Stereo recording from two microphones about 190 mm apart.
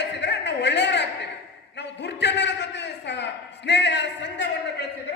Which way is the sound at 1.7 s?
65° left (ahead or behind).